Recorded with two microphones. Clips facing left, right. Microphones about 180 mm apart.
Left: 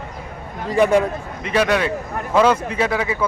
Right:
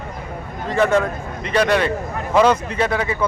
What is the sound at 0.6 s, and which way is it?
A man's voice, 15° left (ahead or behind).